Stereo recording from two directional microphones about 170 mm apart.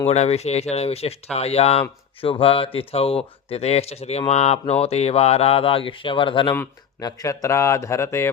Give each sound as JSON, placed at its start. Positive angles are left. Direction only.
{"t": 0.1, "sound": "speech", "side_deg": 40}
{"t": 6.5, "sound": "speech", "side_deg": 20}